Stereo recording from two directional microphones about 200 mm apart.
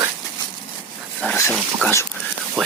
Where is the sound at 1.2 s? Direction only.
10° left (ahead or behind).